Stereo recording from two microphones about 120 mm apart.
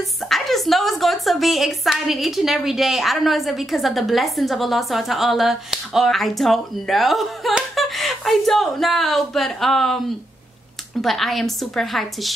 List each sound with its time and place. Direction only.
0.3 s a woman's voice: centre (ahead or behind)
11.0 s a woman's voice: centre (ahead or behind)